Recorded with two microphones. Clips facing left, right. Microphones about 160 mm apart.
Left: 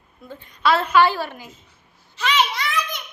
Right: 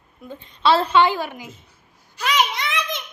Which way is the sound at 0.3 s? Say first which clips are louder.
Right 2 dB; 30° right (ahead or behind).